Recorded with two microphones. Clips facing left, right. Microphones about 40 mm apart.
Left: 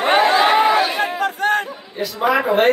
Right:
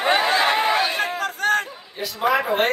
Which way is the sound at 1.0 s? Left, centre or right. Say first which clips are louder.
Left 3 dB; left.